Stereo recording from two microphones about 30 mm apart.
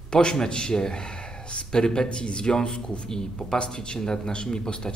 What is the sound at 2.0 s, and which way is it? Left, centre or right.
Speech, left.